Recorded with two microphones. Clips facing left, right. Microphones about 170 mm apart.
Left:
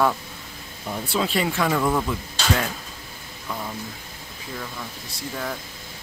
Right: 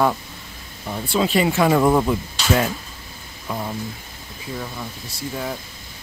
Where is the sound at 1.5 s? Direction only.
25° right (ahead or behind).